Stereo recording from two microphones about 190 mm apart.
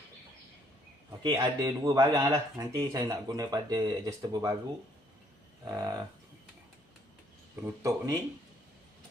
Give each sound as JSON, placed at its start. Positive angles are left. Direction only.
{"t": 1.2, "sound": "speech", "side_deg": -20}
{"t": 5.6, "sound": "speech", "side_deg": -20}
{"t": 7.5, "sound": "speech", "side_deg": -15}